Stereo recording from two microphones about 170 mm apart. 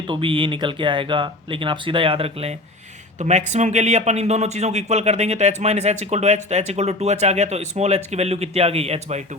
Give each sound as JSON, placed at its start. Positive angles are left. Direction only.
{"t": 0.1, "sound": "speech", "side_deg": -30}